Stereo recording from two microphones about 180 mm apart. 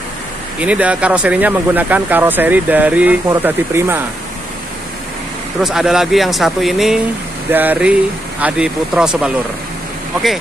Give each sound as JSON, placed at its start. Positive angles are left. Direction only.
{"t": 0.6, "sound": "speech", "side_deg": -5}
{"t": 5.6, "sound": "speech", "side_deg": 0}